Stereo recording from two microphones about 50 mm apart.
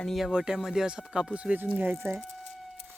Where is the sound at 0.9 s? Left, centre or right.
Centre.